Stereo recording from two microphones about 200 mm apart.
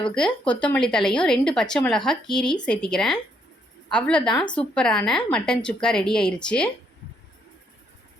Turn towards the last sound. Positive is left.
turn(degrees=5)  # may be behind; listen again after turning